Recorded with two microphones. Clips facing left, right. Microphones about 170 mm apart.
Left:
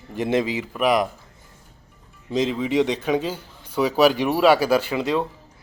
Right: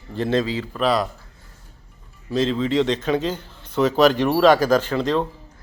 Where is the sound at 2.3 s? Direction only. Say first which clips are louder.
Right 1 dB; 15° left (ahead or behind).